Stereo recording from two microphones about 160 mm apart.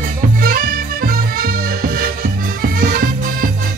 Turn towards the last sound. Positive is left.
turn(degrees=-65)  # may be behind; listen again after turning